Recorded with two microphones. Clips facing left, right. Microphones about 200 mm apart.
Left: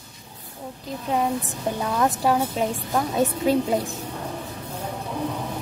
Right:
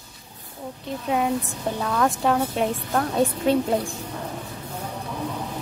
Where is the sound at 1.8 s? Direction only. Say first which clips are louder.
Even; 20° left (ahead or behind).